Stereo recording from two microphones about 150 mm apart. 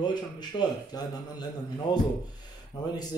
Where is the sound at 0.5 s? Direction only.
30° left (ahead or behind).